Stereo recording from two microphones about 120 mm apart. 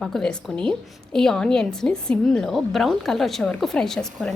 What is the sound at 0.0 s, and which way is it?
A woman's voice, 5° left (ahead or behind).